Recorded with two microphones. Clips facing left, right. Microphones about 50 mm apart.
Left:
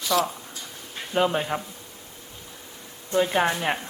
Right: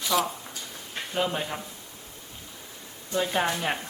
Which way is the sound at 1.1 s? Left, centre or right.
Centre.